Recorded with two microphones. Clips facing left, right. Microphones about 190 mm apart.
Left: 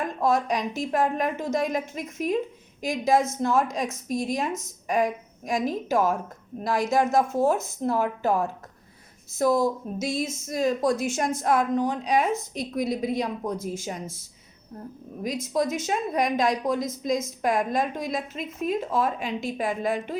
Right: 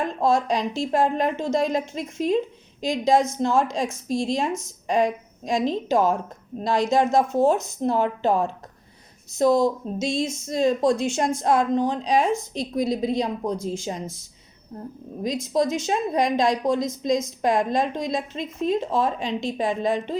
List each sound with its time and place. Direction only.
0.0 s a woman's voice: 30° right (ahead or behind)
3.4 s a woman's voice: 25° right (ahead or behind)
15.6 s speech: 5° left (ahead or behind)
15.9 s a woman's voice: 30° right (ahead or behind)